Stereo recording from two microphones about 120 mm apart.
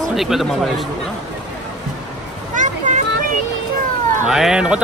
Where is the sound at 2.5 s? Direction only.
90° right.